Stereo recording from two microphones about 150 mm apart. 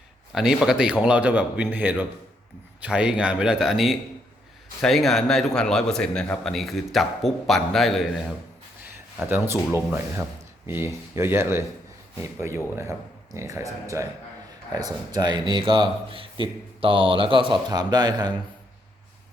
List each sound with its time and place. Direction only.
0.3 s a man's voice: 5° right (ahead or behind)
9.3 s speech: 15° right (ahead or behind)